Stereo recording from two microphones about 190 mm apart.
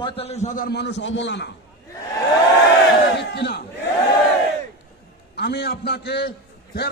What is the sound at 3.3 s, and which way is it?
Speech, 60° left (ahead or behind).